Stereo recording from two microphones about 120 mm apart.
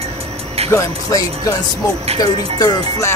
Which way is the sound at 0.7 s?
25° left (ahead or behind).